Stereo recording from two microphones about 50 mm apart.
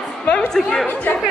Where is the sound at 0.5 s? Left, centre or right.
Centre.